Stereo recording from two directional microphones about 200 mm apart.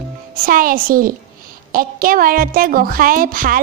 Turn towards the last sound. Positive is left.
turn(degrees=-45)  # may be behind; listen again after turning